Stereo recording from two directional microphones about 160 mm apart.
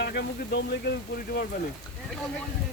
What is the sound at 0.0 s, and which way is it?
Speech, 90° left.